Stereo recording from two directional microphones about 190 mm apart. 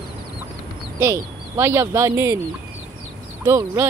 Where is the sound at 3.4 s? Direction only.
15° right (ahead or behind).